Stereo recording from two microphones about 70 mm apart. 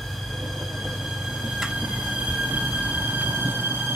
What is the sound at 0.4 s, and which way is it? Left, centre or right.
Train, centre.